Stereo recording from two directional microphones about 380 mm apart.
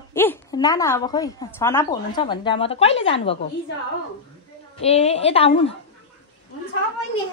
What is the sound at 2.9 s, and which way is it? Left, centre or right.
Speech, left.